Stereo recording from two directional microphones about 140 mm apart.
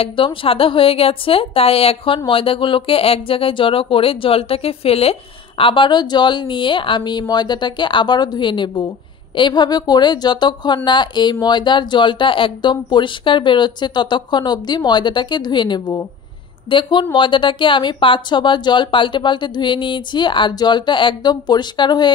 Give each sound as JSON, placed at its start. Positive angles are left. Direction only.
{"t": 0.0, "sound": "speech", "side_deg": 35}